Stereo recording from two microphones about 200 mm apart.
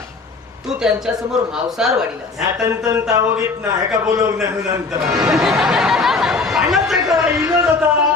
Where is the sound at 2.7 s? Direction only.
15° right (ahead or behind).